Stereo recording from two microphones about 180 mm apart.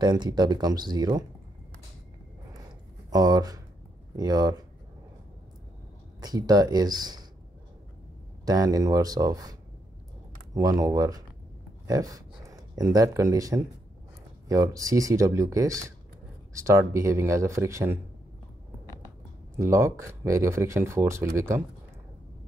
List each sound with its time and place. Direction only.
0.0 s speech: 25° right (ahead or behind)
3.1 s speech: 20° right (ahead or behind)
6.2 s speech: 20° right (ahead or behind)
8.5 s speech: 20° right (ahead or behind)
19.0 s speech: 15° right (ahead or behind)